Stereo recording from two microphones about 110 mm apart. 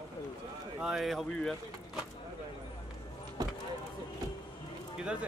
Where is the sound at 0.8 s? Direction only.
5° right (ahead or behind).